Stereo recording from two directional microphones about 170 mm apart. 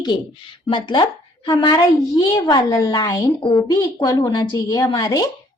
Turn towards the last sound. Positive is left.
turn(degrees=25)  # may be behind; listen again after turning